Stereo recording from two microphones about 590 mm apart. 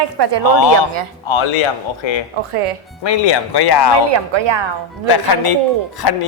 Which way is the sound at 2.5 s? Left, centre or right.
Right.